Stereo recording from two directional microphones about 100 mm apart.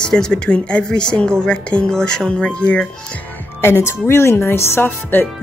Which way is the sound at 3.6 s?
25° left (ahead or behind).